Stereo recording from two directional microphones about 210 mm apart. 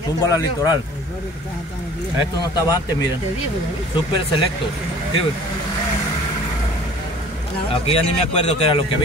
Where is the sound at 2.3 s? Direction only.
20° left (ahead or behind).